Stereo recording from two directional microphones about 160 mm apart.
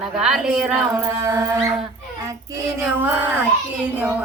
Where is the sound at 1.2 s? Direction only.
20° right (ahead or behind).